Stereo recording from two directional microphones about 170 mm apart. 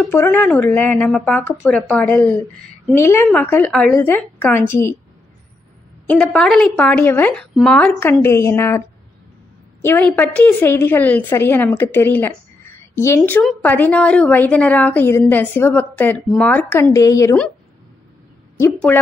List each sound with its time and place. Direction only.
0.1 s a woman's voice: 15° left (ahead or behind)
6.0 s a woman's voice: 5° left (ahead or behind)
18.9 s a woman's voice: 10° left (ahead or behind)